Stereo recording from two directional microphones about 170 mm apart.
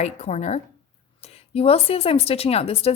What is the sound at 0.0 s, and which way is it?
Speech, 40° left (ahead or behind).